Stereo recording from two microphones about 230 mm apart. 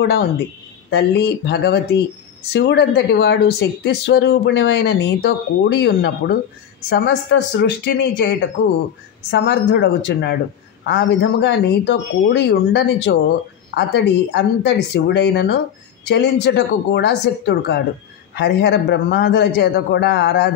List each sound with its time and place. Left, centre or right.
0.0 s speech: left